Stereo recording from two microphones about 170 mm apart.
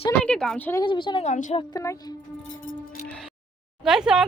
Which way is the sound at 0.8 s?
30° left (ahead or behind).